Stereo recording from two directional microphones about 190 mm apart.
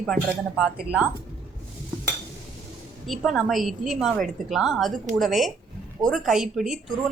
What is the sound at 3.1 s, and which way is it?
A woman's voice, centre (ahead or behind).